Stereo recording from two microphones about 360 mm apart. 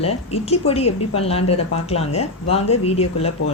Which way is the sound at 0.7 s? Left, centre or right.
Centre.